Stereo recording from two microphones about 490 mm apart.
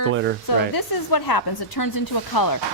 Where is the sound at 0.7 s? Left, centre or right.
Left.